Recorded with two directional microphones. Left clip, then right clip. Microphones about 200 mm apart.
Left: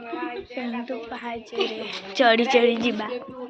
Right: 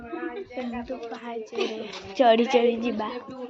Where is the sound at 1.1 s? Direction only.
10° left (ahead or behind).